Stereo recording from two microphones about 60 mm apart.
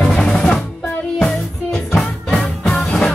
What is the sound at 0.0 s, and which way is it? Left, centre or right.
Drum, centre.